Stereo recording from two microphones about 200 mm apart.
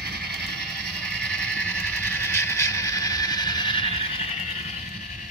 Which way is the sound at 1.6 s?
10° left (ahead or behind).